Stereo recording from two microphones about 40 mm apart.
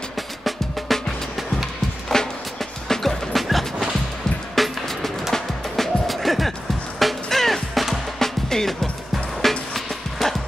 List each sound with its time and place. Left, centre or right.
0.4 s music: centre
2.1 s music: centre